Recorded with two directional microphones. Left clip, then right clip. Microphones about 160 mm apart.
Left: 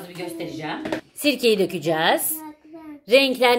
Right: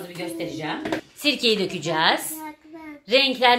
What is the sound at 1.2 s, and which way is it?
A woman's voice, 90° left.